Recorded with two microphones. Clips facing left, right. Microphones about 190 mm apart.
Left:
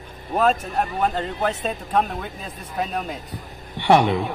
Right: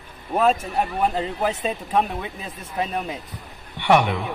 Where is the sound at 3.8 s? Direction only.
30° left (ahead or behind).